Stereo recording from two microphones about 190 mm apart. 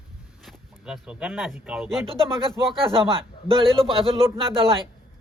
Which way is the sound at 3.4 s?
30° right (ahead or behind).